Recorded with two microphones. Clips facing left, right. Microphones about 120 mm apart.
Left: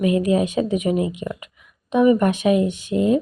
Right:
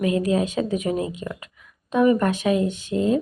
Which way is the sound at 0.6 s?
40° right (ahead or behind).